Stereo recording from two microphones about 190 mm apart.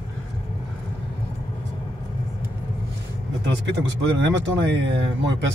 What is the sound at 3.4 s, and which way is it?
Speech, 65° right (ahead or behind).